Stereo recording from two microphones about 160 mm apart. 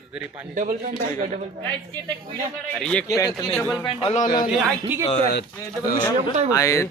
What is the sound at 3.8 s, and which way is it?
Speech, 30° left (ahead or behind).